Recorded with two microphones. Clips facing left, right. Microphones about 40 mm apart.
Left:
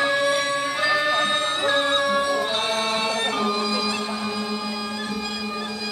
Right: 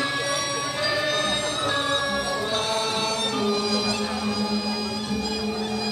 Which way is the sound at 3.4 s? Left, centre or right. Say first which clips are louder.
Left 1 dB; left.